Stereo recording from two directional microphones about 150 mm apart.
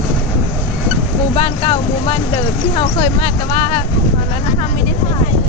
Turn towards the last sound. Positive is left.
turn(degrees=35)  # may be behind; listen again after turning